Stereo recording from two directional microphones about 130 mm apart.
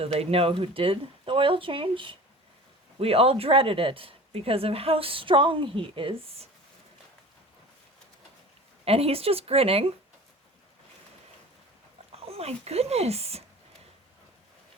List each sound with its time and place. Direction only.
0.0 s speech: 50° right (ahead or behind)
8.8 s speech: 50° right (ahead or behind)
12.1 s speech: 50° right (ahead or behind)